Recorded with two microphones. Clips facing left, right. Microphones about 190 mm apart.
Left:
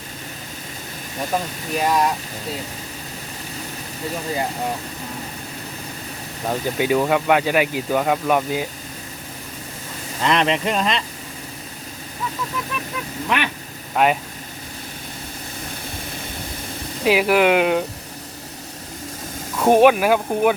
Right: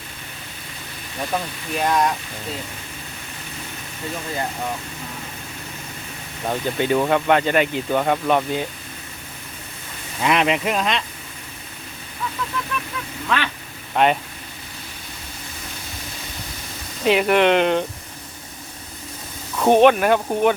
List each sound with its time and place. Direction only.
1.7 s speech: 5° left (ahead or behind)
6.5 s speech: 10° left (ahead or behind)
10.2 s speech: 5° right (ahead or behind)
13.2 s speech: 15° left (ahead or behind)
13.9 s speech: 5° left (ahead or behind)
17.0 s speech: 5° left (ahead or behind)
19.5 s speech: 10° left (ahead or behind)